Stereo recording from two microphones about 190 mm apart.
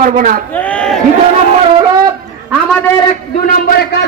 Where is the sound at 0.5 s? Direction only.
5° left (ahead or behind).